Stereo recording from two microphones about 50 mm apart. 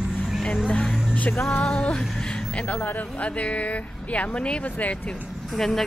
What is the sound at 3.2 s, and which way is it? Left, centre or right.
Speech, left.